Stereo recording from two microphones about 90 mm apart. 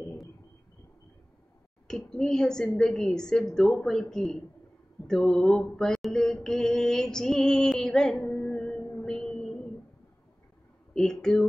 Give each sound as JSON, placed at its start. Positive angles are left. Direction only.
{"t": 1.9, "sound": "a woman's voice", "side_deg": 5}
{"t": 5.0, "sound": "mantra", "side_deg": 5}
{"t": 10.9, "sound": "speech", "side_deg": 5}